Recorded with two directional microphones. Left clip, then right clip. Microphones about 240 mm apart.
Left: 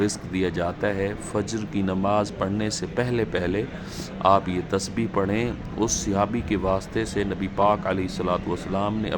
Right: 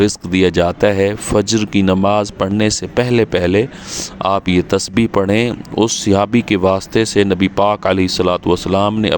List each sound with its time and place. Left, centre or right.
0.0 s speech: right